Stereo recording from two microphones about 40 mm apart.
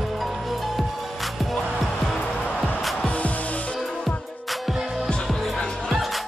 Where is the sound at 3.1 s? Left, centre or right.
Left.